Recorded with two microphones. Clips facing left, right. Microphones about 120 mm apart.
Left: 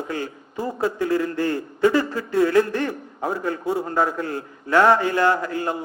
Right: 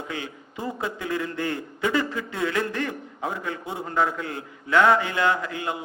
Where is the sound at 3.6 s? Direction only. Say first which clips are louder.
Left 9 dB; 20° right (ahead or behind).